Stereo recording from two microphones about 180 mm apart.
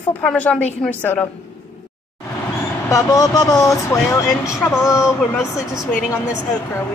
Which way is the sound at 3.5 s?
Centre (ahead or behind).